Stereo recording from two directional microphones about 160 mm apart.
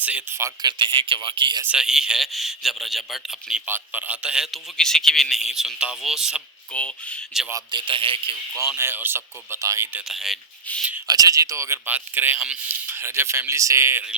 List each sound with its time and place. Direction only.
0.0 s speech: 10° right (ahead or behind); by 1.6 s 30° right (ahead or behind)
1.6 s a man's voice: 5° right (ahead or behind)
6.7 s speech: 5° left (ahead or behind)
7.7 s speech: 30° right (ahead or behind)
8.5 s speech: 15° right (ahead or behind)
10.1 s a man's voice: centre (ahead or behind)
11.1 s speech: 25° right (ahead or behind)